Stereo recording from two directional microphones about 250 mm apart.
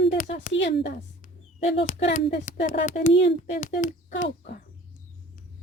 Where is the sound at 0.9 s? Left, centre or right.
Left.